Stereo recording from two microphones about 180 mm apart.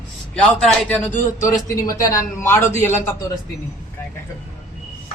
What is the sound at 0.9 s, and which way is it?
A man's voice, 15° left (ahead or behind).